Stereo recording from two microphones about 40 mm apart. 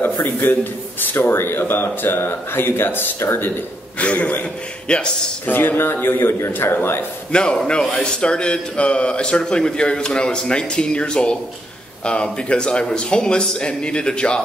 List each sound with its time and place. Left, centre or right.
0.0 s a man's voice: left
1.1 s speech: left
4.0 s a man's voice: left
5.5 s speech: left
7.5 s speech: centre